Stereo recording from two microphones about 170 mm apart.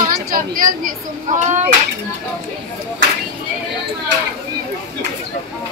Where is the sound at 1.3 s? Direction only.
45° right (ahead or behind).